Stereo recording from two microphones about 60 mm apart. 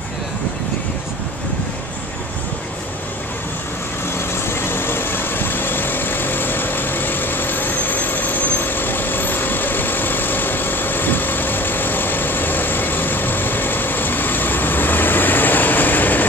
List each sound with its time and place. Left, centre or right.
4.3 s vehicle: left